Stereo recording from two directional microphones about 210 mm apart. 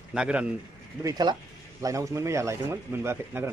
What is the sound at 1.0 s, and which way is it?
Speech, 20° right (ahead or behind).